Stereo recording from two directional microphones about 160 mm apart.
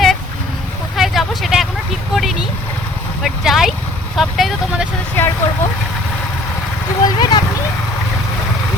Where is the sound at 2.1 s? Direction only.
Centre (ahead or behind).